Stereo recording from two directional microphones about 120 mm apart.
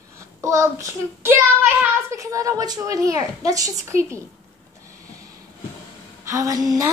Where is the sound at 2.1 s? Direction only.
30° right (ahead or behind).